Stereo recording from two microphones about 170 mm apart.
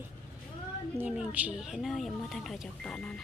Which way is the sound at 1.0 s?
10° right (ahead or behind).